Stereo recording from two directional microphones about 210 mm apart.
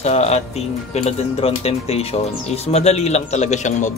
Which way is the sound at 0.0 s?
30° left (ahead or behind).